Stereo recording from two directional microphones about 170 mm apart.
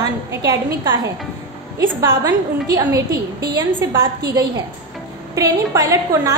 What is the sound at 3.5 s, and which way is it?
A woman's voice, 20° right (ahead or behind).